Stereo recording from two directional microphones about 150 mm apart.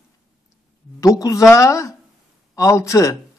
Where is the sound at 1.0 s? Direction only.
20° left (ahead or behind).